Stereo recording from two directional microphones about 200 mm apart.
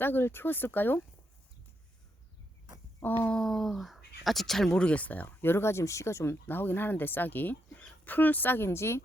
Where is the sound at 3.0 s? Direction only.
10° left (ahead or behind).